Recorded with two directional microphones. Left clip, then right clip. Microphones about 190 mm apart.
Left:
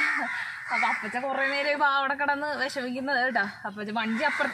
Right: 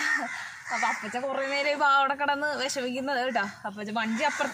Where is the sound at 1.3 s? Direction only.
20° right (ahead or behind).